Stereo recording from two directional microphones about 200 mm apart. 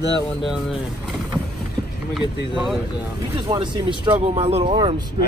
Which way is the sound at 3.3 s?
25° right (ahead or behind).